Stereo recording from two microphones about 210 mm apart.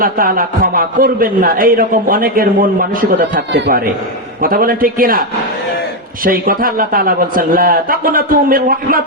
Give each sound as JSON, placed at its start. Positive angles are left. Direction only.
{"t": 0.0, "sound": "a man's voice", "side_deg": -45}
{"t": 6.2, "sound": "a man's voice", "side_deg": -45}